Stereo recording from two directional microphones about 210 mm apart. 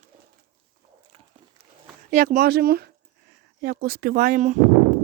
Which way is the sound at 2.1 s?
40° right (ahead or behind).